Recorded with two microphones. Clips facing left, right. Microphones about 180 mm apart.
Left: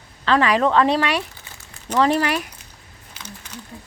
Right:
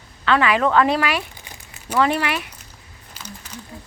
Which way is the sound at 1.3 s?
15° right (ahead or behind).